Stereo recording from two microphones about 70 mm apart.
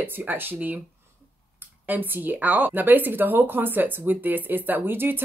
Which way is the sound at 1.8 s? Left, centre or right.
Right.